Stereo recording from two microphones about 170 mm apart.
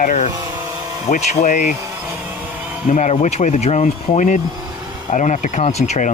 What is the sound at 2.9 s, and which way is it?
Speech, 45° left (ahead or behind).